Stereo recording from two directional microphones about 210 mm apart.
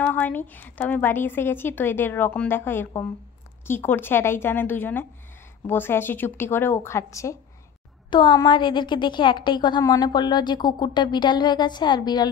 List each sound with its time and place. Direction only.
0.0 s a woman's voice: 10° left (ahead or behind)